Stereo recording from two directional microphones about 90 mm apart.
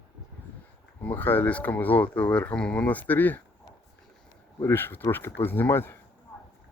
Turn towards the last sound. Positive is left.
turn(degrees=25)  # may be behind; listen again after turning